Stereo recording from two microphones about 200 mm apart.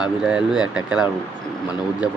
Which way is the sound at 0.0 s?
5° right (ahead or behind).